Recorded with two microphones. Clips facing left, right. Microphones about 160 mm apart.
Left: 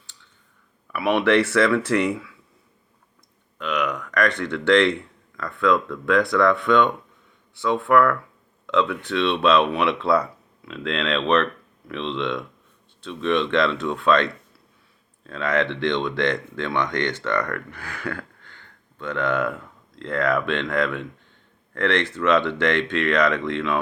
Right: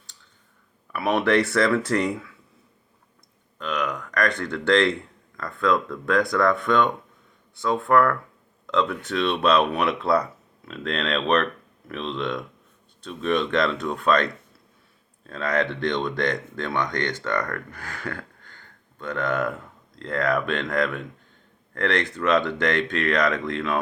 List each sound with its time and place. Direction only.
0.9 s speech: 45° right (ahead or behind)
3.6 s speech: 35° right (ahead or behind)
15.3 s speech: 40° right (ahead or behind)